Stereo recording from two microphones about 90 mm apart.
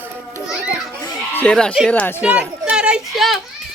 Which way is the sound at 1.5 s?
10° left (ahead or behind).